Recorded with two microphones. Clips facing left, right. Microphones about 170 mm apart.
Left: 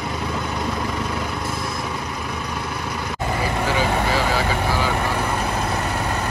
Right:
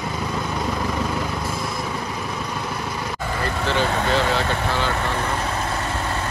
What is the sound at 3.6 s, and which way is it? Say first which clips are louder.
Vehicle: right 1 dB; 10° left (ahead or behind).